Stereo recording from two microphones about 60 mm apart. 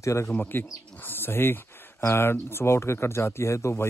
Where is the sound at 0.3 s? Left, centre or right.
Left.